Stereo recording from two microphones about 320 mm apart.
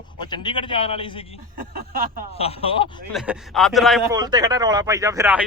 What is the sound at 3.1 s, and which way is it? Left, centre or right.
Speech, centre.